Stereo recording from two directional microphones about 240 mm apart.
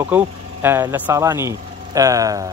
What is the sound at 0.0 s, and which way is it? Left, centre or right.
Speech, centre.